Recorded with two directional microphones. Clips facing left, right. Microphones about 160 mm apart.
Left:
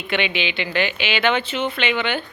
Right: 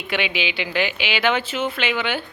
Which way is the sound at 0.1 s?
10° right (ahead or behind).